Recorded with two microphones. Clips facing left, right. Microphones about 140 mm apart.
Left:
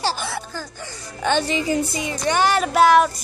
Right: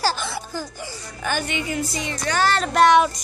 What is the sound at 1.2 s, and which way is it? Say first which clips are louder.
Speech: left 5 dB; 25° left (ahead or behind).